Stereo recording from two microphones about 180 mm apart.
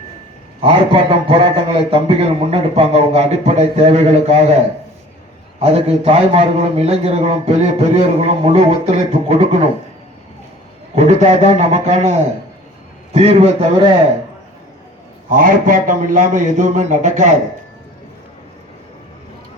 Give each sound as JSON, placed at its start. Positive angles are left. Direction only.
{"t": 0.6, "sound": "a man's voice", "side_deg": -30}
{"t": 5.5, "sound": "a man's voice", "side_deg": -35}
{"t": 10.9, "sound": "a man's voice", "side_deg": -40}
{"t": 13.1, "sound": "a man's voice", "side_deg": -35}
{"t": 15.4, "sound": "a man's voice", "side_deg": -50}